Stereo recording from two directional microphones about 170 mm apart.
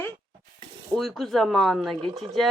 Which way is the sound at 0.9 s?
Centre (ahead or behind).